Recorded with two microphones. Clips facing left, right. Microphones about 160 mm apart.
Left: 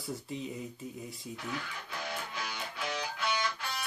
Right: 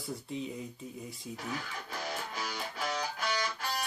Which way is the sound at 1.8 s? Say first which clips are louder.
Right 1 dB; 40° right (ahead or behind).